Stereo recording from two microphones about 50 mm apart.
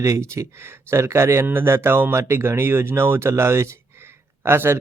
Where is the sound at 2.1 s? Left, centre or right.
Right.